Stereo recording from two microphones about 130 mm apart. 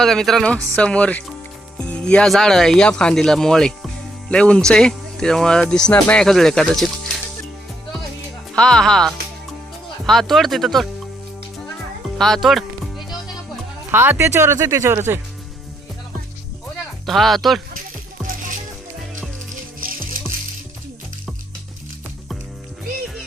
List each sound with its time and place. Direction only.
0.0 s speech: 5° left (ahead or behind)
8.5 s speech: 5° left (ahead or behind)
12.1 s music: centre (ahead or behind)
13.9 s speech: 15° right (ahead or behind)
17.1 s speech: centre (ahead or behind)
18.2 s music: centre (ahead or behind)
19.8 s music: 90° right